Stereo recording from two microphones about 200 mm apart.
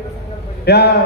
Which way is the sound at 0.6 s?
55° left (ahead or behind).